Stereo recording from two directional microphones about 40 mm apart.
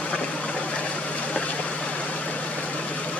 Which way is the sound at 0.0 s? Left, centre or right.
Left.